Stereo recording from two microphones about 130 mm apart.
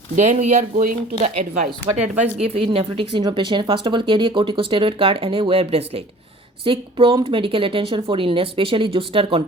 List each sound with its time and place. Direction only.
0.2 s speech: 65° right (ahead or behind)
2.4 s speech: 50° right (ahead or behind)